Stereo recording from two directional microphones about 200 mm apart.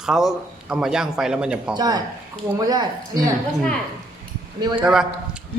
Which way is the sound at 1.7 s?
20° right (ahead or behind).